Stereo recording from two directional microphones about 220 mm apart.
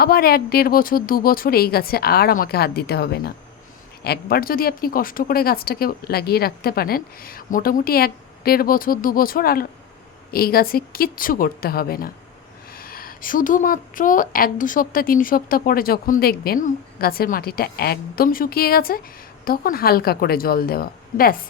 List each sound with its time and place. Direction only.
0.0 s a woman's voice: 45° left (ahead or behind)